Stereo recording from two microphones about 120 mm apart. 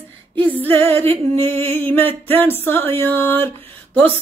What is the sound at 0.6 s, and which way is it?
Music, 20° left (ahead or behind).